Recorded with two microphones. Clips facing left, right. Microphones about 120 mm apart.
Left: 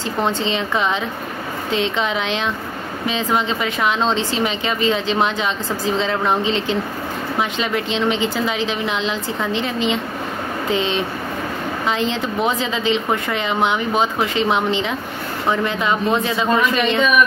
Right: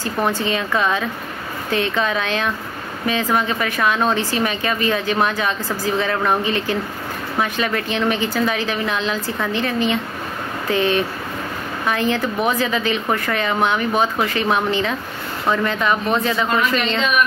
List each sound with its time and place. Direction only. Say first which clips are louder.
0.2 s speech: even; 20° left (ahead or behind)